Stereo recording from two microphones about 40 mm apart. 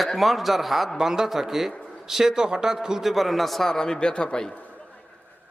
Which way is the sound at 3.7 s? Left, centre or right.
Centre.